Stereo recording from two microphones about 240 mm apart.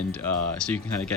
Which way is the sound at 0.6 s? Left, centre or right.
Centre.